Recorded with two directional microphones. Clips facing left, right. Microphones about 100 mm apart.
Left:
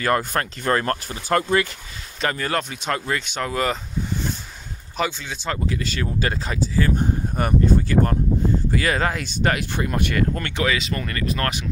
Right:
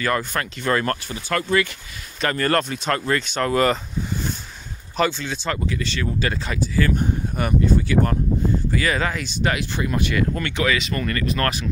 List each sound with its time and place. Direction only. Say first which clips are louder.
0.0 s speech: left 2 dB; 45° left (ahead or behind)
2.2 s speech: right 3 dB; 10° left (ahead or behind)
4.9 s speech: right 4 dB; 10° left (ahead or behind)
5.7 s speech: even; 40° left (ahead or behind)
7.3 s speech: left 1 dB; 45° left (ahead or behind)
10.7 s speech: right 2 dB; 25° left (ahead or behind)